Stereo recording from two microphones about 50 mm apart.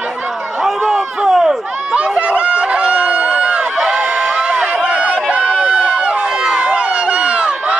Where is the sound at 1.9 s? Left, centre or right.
Right.